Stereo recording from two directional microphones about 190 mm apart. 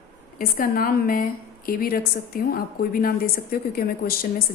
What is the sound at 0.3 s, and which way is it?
A woman's voice, 50° left (ahead or behind).